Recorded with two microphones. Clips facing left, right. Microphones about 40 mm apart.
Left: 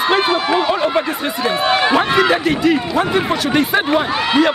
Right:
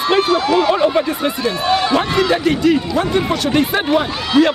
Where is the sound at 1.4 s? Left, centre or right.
Left.